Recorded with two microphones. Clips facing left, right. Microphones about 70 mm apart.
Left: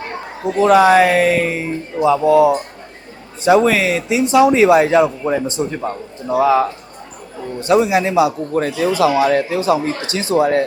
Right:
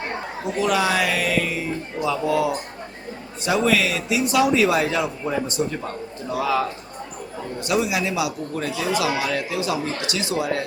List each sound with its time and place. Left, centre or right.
0.4 s speech: left
8.5 s speech: left